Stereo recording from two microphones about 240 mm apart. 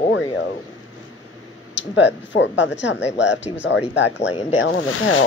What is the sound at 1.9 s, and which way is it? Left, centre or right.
Speech, left.